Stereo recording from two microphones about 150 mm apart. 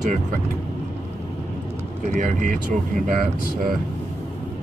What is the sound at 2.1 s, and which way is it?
Speech, 50° right (ahead or behind).